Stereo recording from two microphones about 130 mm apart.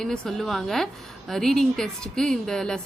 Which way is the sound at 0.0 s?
5° left (ahead or behind).